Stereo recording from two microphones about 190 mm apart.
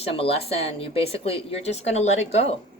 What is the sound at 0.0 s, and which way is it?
Speech, 30° left (ahead or behind).